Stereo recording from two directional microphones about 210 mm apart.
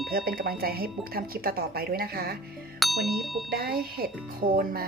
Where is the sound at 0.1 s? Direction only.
45° right (ahead or behind).